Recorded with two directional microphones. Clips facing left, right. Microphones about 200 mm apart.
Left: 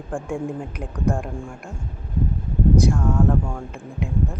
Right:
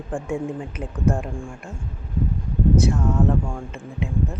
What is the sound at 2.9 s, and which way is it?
Speech, 5° right (ahead or behind).